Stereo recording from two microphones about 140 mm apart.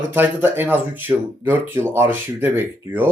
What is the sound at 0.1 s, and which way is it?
Speech, 15° right (ahead or behind).